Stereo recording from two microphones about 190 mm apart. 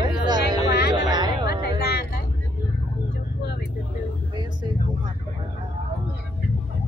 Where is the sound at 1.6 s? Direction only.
60° left (ahead or behind).